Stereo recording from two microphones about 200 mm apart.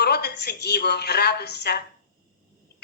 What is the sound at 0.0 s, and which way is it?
A woman's voice, 55° left (ahead or behind).